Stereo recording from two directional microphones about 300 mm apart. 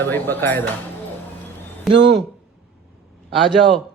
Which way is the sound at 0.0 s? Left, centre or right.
Centre.